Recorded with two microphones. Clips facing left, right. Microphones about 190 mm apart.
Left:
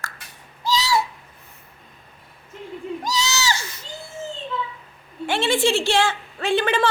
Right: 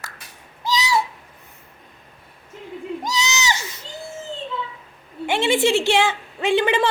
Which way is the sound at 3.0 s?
20° right (ahead or behind).